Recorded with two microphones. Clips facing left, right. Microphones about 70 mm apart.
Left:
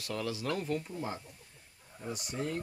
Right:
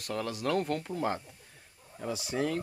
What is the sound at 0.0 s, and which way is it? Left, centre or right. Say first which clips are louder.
Speech: right 3 dB; right.